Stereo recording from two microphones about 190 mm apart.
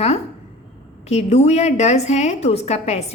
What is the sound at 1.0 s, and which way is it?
A woman's voice, 35° left (ahead or behind).